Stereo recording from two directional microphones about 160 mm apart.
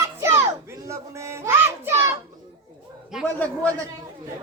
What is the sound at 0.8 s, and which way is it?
A child's voice, 20° right (ahead or behind).